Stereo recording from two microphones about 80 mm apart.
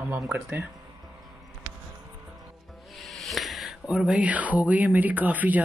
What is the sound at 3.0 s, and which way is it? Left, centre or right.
Speech, centre.